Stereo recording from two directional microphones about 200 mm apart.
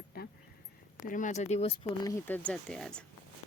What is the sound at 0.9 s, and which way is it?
Speech, 40° left (ahead or behind).